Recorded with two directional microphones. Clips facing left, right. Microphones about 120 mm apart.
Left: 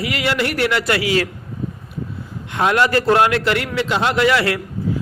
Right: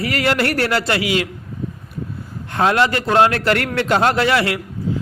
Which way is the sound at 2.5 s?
25° right (ahead or behind).